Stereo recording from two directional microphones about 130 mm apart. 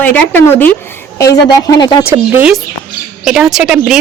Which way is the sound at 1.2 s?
30° left (ahead or behind).